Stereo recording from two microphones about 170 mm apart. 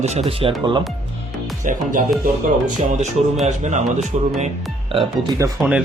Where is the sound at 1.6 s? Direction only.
50° right (ahead or behind).